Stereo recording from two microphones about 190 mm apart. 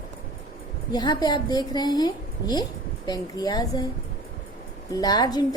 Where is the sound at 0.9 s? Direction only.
20° left (ahead or behind).